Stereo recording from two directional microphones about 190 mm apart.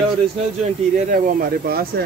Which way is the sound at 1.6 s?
55° right (ahead or behind).